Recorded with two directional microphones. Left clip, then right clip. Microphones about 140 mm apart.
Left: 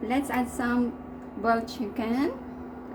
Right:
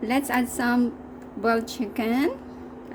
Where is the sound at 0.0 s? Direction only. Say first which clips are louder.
Right 3 dB; 90° right.